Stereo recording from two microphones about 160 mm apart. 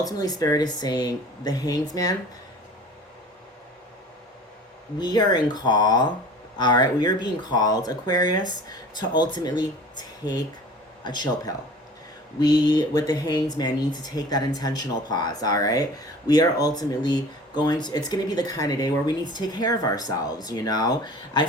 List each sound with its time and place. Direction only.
0.0 s speech: 25° left (ahead or behind)
4.9 s speech: 25° left (ahead or behind)
11.0 s speech: 25° left (ahead or behind)